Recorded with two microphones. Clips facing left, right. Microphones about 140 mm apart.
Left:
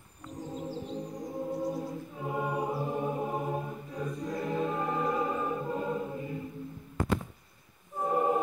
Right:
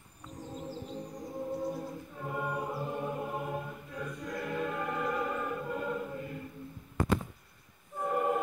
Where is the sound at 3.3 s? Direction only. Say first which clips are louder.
Left 3 dB; 40° left (ahead or behind).